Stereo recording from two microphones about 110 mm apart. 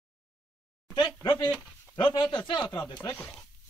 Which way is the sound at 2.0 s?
50° left (ahead or behind).